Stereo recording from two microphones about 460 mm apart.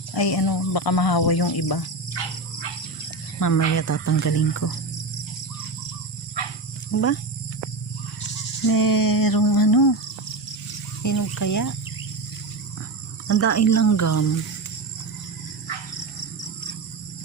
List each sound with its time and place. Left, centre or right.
0.1 s speech: left
3.4 s speech: left
6.4 s insect: left
6.9 s speech: left
8.6 s a sound: left
11.0 s speech: left
13.2 s speech: left